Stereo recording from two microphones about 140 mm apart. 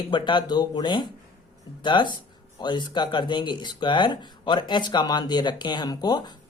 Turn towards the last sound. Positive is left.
turn(degrees=30)  # may be behind; listen again after turning